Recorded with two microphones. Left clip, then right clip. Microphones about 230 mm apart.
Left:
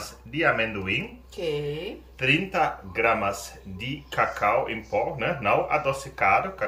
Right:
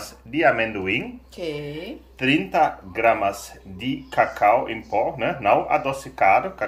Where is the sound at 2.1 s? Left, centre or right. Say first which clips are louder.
Right 4 dB; centre.